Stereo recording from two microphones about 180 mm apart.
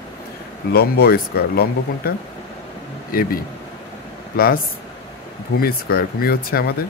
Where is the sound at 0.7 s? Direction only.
60° left (ahead or behind).